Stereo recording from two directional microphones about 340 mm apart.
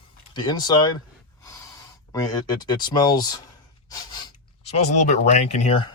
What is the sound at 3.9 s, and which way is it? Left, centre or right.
Snort, centre.